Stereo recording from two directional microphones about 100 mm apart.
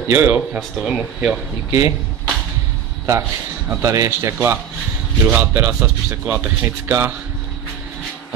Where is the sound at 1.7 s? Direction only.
30° right (ahead or behind).